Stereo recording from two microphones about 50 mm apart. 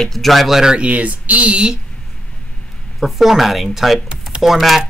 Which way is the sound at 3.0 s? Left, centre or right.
Centre.